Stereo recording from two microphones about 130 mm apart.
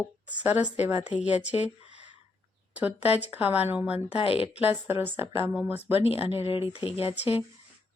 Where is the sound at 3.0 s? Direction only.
50° left (ahead or behind).